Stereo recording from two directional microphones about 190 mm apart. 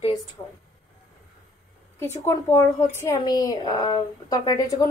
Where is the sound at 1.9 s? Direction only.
15° left (ahead or behind).